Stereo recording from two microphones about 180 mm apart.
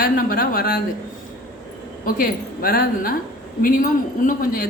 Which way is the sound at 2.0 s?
55° left (ahead or behind).